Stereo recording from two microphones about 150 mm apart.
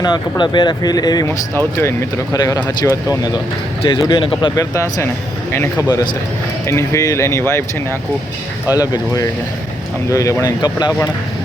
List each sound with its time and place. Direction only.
0.0 s speech: 30° left (ahead or behind)
4.7 s speech: 20° left (ahead or behind)
8.7 s speech: 25° left (ahead or behind)